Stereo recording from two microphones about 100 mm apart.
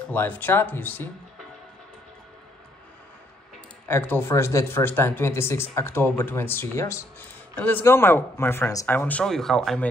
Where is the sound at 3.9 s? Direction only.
20° left (ahead or behind).